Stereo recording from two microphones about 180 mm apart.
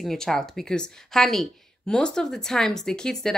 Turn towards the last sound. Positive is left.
turn(degrees=5)  # may be behind; listen again after turning